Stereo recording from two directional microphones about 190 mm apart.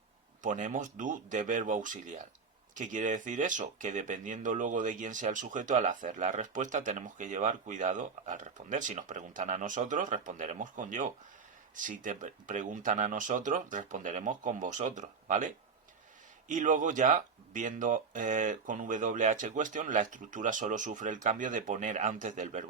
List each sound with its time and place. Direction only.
0.4 s speech: 40° right (ahead or behind)